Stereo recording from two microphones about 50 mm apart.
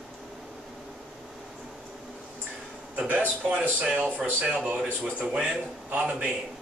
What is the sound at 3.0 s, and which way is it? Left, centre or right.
A man's voice, right.